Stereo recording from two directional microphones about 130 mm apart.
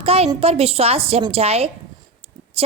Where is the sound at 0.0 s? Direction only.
50° right (ahead or behind).